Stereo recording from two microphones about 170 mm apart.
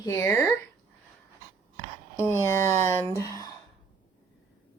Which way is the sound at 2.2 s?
15° left (ahead or behind).